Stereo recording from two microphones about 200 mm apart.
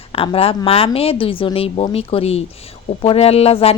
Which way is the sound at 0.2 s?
30° left (ahead or behind).